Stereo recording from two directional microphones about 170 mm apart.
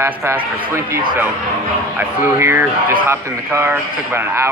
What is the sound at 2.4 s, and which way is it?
A man's voice, 15° right (ahead or behind).